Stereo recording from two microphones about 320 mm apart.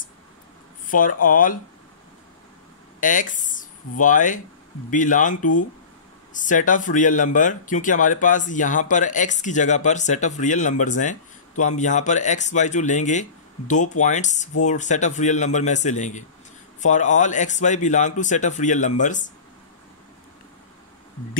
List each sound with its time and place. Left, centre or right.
0.8 s speech: left
3.0 s speech: left
5.4 s speech: left
6.3 s speech: left